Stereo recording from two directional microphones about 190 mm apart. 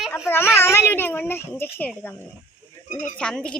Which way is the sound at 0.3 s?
10° left (ahead or behind).